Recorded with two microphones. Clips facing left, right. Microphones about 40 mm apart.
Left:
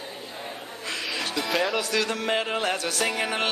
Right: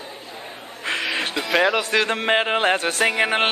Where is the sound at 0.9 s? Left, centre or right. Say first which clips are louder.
Right 7 dB; right.